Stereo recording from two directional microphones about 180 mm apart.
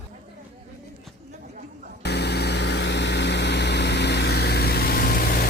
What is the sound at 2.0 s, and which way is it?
Vehicle, 65° left (ahead or behind).